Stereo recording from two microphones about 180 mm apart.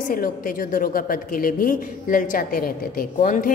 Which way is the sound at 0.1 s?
50° left (ahead or behind).